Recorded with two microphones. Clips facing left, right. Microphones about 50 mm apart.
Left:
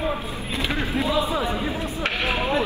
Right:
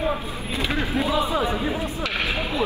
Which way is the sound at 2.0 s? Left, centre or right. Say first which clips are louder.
Left 1 dB; left.